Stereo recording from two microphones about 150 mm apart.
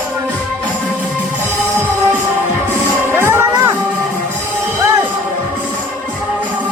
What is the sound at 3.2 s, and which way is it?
Music, 15° right (ahead or behind).